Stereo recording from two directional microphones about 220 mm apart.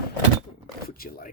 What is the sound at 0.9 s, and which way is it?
Speech, 40° left (ahead or behind).